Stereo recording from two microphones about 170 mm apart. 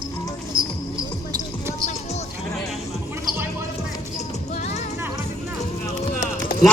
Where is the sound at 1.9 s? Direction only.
40° left (ahead or behind).